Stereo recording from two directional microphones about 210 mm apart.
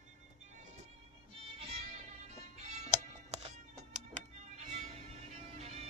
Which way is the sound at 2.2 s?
30° right (ahead or behind).